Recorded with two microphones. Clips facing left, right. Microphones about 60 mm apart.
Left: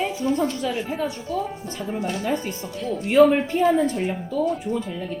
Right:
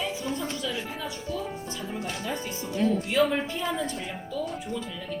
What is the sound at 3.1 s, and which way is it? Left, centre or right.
A woman's voice, left.